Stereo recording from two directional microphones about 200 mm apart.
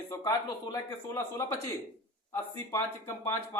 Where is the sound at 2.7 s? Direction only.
15° left (ahead or behind).